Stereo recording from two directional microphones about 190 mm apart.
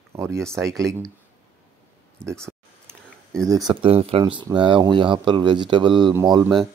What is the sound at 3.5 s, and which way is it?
Speech, 20° right (ahead or behind).